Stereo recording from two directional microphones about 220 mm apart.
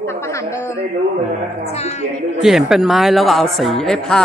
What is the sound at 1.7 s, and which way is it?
Speech, 30° left (ahead or behind).